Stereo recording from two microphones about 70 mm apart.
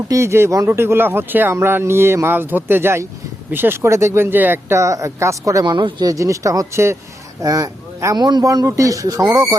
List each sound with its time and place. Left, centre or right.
0.1 s speech: right
4.7 s speech: right
5.6 s speech: right
6.1 s speech: right
8.2 s speech: right
8.6 s speech: right
9.2 s speech: right